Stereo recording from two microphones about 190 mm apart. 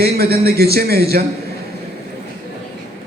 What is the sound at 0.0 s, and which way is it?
A man's voice, 55° right (ahead or behind).